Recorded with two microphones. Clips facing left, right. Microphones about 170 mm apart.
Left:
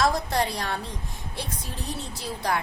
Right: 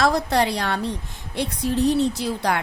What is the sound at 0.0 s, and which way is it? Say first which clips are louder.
A woman's voice: right 4 dB; 75° right (ahead or behind).